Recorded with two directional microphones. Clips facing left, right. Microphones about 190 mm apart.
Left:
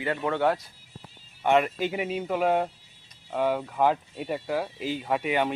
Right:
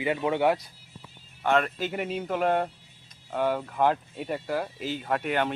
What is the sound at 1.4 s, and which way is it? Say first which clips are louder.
Speech: left 2 dB; 15° left (ahead or behind).